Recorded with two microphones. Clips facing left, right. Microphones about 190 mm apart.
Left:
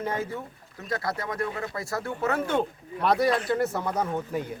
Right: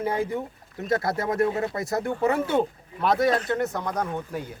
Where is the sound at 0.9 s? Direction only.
25° right (ahead or behind); by 4.4 s 5° left (ahead or behind).